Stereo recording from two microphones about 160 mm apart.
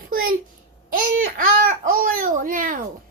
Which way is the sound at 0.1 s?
65° right (ahead or behind).